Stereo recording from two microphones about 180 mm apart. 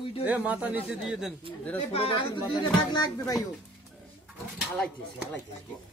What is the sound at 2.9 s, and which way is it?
Speech, 20° left (ahead or behind).